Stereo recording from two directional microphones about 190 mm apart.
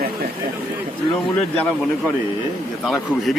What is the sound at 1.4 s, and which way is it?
Speech, 5° left (ahead or behind).